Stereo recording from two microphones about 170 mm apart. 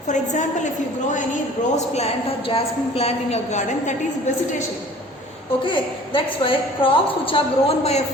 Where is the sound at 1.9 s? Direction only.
35° left (ahead or behind).